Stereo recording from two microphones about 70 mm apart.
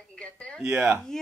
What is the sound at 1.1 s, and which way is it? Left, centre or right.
Speech, centre.